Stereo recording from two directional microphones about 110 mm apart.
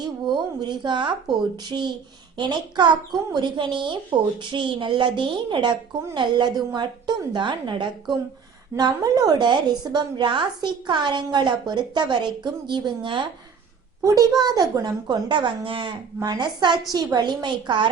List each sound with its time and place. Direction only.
0.0 s speech: 40° right (ahead or behind)
8.7 s speech: 35° right (ahead or behind)
14.0 s speech: 30° right (ahead or behind)